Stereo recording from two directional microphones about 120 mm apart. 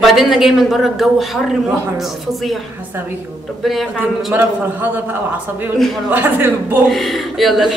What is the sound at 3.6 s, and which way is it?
Speech, centre (ahead or behind).